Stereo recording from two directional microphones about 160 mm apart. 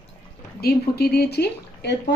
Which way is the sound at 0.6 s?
75° left (ahead or behind).